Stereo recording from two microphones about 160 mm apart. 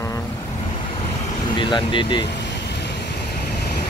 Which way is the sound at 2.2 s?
90° left.